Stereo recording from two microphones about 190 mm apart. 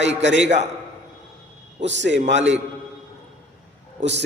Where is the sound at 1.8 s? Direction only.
70° right (ahead or behind).